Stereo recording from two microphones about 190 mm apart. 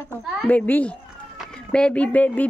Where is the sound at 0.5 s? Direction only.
10° left (ahead or behind).